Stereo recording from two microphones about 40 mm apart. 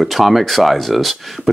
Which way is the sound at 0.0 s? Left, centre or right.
Centre.